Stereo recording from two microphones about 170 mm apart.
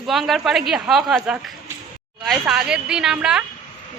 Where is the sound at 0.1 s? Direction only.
Centre (ahead or behind).